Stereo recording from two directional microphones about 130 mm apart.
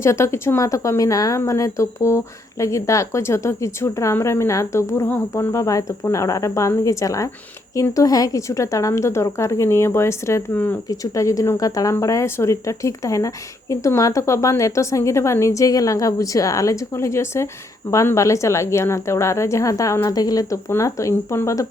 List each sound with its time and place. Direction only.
0.0 s speech: 20° left (ahead or behind)